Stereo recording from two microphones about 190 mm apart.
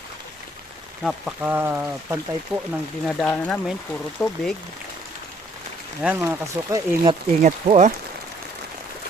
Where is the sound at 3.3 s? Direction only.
10° left (ahead or behind).